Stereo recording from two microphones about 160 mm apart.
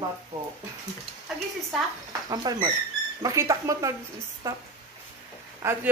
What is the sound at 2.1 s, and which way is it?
Speech, 25° right (ahead or behind).